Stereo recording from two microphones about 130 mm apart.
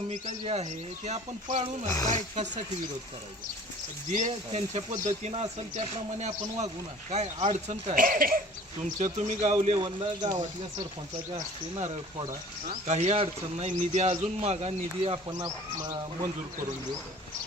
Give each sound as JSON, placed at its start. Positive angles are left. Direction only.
{"t": 0.1, "sound": "speech", "side_deg": -55}
{"t": 1.9, "sound": "speech", "side_deg": 30}
{"t": 4.3, "sound": "speech", "side_deg": -60}
{"t": 8.8, "sound": "speech", "side_deg": -65}
{"t": 9.7, "sound": "speech", "side_deg": -35}
{"t": 12.6, "sound": "speech", "side_deg": -60}